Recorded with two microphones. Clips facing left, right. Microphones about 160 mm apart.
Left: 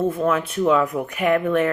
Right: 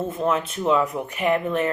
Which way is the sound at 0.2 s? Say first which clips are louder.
Left 3 dB; 25° right (ahead or behind).